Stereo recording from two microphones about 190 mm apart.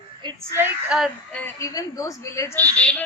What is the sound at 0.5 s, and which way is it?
Speech, 10° right (ahead or behind).